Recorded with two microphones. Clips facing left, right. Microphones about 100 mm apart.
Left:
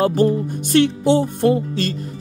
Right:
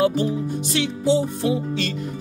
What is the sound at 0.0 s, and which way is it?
Speech, 45° left (ahead or behind).